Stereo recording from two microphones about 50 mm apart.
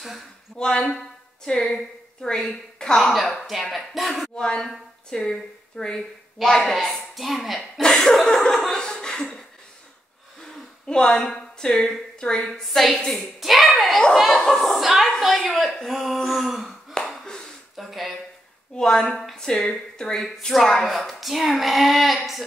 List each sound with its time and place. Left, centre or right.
0.6 s a woman's voice: centre
3.0 s a woman's voice: centre
4.4 s a woman's voice: centre
7.8 s speech: centre
10.9 s a woman's voice: centre
12.4 s a woman's voice: centre
17.0 s a sound: centre
18.8 s a woman's voice: centre